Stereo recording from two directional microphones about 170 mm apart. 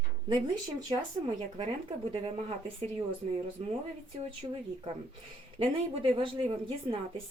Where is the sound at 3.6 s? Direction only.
40° right (ahead or behind).